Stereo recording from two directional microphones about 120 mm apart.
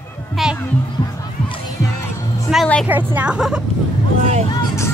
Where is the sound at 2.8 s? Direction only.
15° right (ahead or behind).